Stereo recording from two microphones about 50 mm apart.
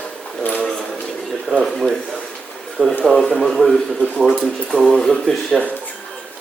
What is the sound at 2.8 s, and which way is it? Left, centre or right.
Speech, right.